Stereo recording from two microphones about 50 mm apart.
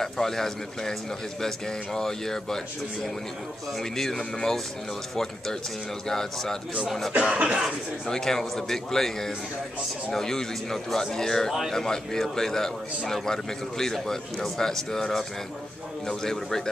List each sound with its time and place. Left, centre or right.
0.0 s a man's voice: centre
2.0 s a man's voice: centre
7.2 s speech: right
8.1 s a man's voice: centre